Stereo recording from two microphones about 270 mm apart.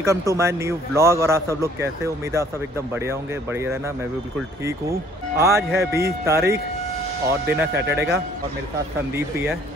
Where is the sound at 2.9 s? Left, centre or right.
Centre.